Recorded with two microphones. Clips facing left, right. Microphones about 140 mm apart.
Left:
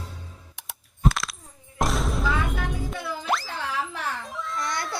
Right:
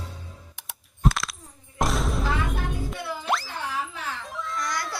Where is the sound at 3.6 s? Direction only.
90° left.